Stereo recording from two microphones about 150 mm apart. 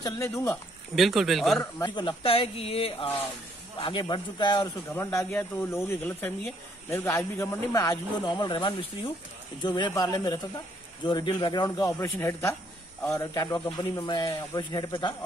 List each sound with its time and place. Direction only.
0.0 s speech: 20° left (ahead or behind)
0.9 s speech: centre (ahead or behind)
1.9 s speech: 30° left (ahead or behind)
4.9 s speech: 15° left (ahead or behind)